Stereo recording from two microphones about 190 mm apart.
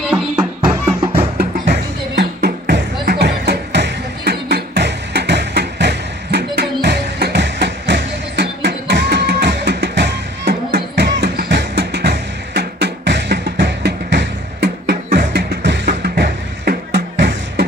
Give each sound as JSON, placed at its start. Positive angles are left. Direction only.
{"t": 0.0, "sound": "music", "side_deg": -5}
{"t": 1.0, "sound": "music", "side_deg": -30}
{"t": 1.4, "sound": "music", "side_deg": -65}